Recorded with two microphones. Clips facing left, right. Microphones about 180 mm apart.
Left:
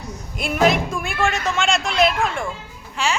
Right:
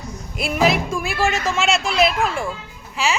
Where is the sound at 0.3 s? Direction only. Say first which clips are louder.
Left 1 dB; centre (ahead or behind).